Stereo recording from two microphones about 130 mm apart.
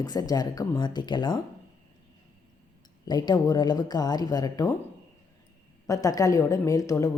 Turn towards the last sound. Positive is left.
turn(degrees=25)  # may be behind; listen again after turning